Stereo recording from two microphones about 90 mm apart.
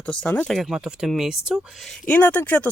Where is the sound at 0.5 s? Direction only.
Centre (ahead or behind).